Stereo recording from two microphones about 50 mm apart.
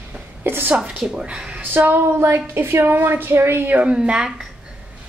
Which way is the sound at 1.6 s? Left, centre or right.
Right.